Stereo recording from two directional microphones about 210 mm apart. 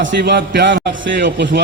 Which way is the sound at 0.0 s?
55° right (ahead or behind).